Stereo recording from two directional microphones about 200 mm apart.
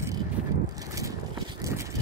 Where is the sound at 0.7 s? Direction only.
15° right (ahead or behind).